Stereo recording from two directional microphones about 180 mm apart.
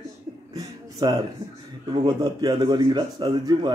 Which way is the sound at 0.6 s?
20° right (ahead or behind).